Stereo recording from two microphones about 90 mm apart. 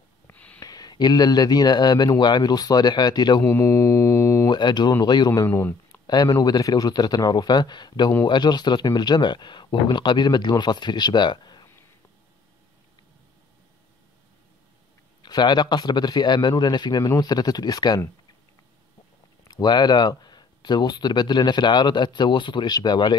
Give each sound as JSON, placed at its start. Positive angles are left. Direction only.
{"t": 0.3, "sound": "gasp", "side_deg": 15}
{"t": 0.6, "sound": "speech", "side_deg": 45}
{"t": 3.4, "sound": "mantra", "side_deg": 30}
{"t": 4.5, "sound": "speech", "side_deg": 55}
{"t": 5.5, "sound": "speech", "side_deg": 30}
{"t": 6.0, "sound": "speech", "side_deg": 45}
{"t": 15.2, "sound": "speech", "side_deg": 55}
{"t": 19.4, "sound": "speech", "side_deg": 50}